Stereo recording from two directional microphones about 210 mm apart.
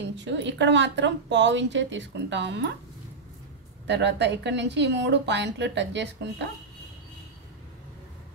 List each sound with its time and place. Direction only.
0.1 s a woman's voice: 60° right (ahead or behind)
3.8 s a woman's voice: 55° right (ahead or behind)